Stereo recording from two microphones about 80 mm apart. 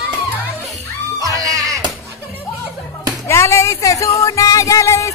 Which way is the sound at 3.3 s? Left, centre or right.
Left.